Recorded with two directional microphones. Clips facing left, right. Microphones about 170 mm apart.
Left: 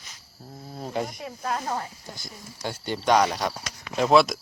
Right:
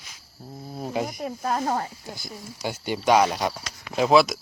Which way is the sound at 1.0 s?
45° right (ahead or behind).